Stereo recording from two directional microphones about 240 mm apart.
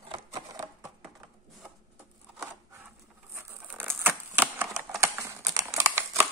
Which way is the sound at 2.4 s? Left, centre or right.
Centre.